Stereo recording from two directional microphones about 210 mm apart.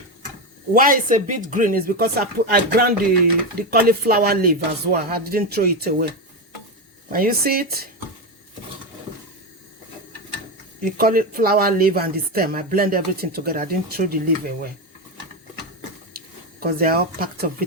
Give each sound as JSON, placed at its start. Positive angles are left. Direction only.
{"t": 0.7, "sound": "speech", "side_deg": -40}
{"t": 7.1, "sound": "speech", "side_deg": -45}
{"t": 10.8, "sound": "speech", "side_deg": -45}
{"t": 16.6, "sound": "speech", "side_deg": -45}